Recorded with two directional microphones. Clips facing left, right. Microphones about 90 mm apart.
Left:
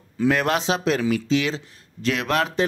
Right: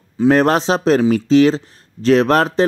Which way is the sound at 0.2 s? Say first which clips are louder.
Right 8 dB; 35° right (ahead or behind).